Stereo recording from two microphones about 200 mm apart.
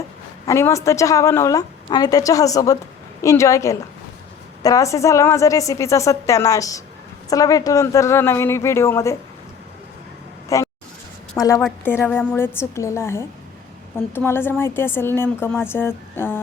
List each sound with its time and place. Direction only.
0.4 s a woman's voice: 15° left (ahead or behind)
10.5 s a woman's voice: 15° left (ahead or behind)